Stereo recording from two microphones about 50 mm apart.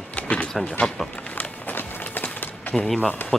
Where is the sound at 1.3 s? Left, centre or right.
Left.